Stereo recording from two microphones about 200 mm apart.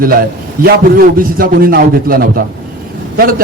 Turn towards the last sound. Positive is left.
turn(degrees=-45)  # may be behind; listen again after turning